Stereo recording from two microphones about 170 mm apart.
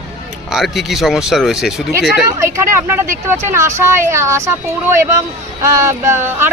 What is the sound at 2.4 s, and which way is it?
Speech, 15° right (ahead or behind).